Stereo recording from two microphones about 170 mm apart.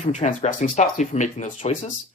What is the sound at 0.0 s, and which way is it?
Speech, 45° left (ahead or behind).